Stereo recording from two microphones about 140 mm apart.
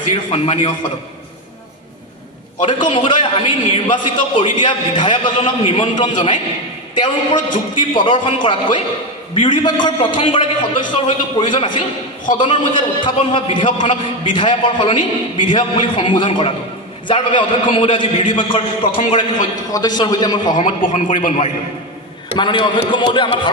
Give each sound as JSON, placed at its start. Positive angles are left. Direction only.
{"t": 0.1, "sound": "a man's voice", "side_deg": 40}
{"t": 2.6, "sound": "a man's voice", "side_deg": 35}
{"t": 19.7, "sound": "a man's voice", "side_deg": 30}
{"t": 20.6, "sound": "a man's voice", "side_deg": 60}
{"t": 22.4, "sound": "a man's voice", "side_deg": 35}